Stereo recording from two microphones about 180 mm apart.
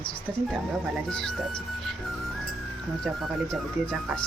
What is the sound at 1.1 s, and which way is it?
Music, 5° left (ahead or behind).